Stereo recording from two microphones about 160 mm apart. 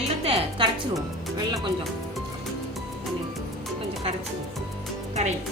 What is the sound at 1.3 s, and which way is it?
Speech, 25° right (ahead or behind).